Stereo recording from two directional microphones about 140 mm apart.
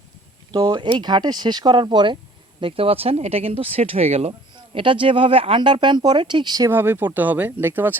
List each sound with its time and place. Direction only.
0.5 s speech: 30° right (ahead or behind)
6.7 s speech: 15° right (ahead or behind)